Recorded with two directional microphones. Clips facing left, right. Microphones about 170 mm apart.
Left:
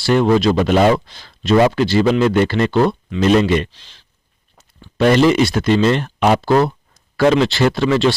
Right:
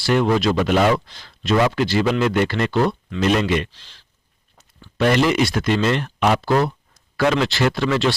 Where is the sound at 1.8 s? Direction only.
30° left (ahead or behind).